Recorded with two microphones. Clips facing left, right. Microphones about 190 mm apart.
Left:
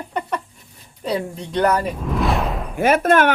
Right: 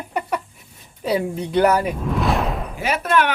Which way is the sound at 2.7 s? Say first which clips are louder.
Left 6 dB; 50° left (ahead or behind).